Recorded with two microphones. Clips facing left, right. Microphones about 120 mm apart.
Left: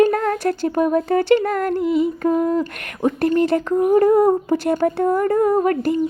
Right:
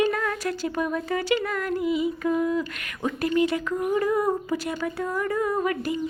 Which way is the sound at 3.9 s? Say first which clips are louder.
Left 10 dB; 50° left (ahead or behind).